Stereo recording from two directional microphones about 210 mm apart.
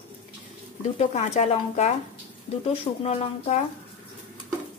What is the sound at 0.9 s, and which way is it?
A woman's voice, 30° left (ahead or behind).